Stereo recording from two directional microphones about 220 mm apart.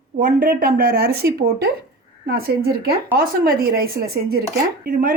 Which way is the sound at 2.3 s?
45° right (ahead or behind).